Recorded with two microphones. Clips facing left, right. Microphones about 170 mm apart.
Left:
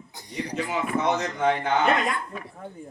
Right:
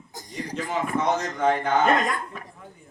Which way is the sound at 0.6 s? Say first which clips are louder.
Even; 45° right (ahead or behind).